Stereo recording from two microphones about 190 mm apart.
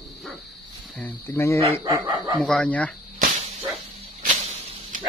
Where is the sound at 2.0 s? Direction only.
20° right (ahead or behind).